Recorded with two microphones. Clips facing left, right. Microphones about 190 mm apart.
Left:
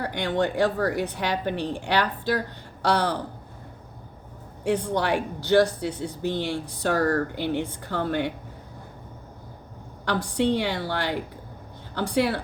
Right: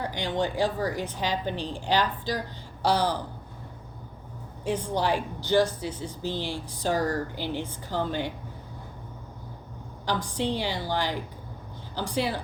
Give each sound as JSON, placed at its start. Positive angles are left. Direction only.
{"t": 0.0, "sound": "speech", "side_deg": 65}
{"t": 4.6, "sound": "speech", "side_deg": 70}
{"t": 10.1, "sound": "speech", "side_deg": 65}